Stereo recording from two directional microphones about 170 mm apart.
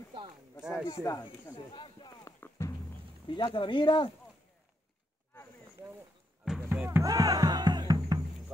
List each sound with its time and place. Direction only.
0.6 s speech: 5° right (ahead or behind)
0.8 s speech: 20° left (ahead or behind)
1.7 s a sound: 30° left (ahead or behind)
2.6 s music: 15° left (ahead or behind)
3.3 s speech: 25° left (ahead or behind)
6.4 s music: 5° right (ahead or behind); by 8.3 s 20° right (ahead or behind)